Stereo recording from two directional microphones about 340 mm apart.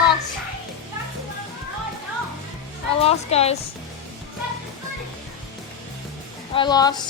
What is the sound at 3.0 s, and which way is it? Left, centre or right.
Music, centre.